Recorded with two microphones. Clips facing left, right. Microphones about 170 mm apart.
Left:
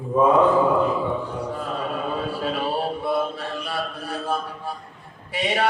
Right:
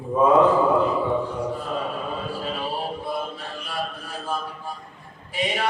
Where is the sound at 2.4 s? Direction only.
65° left (ahead or behind).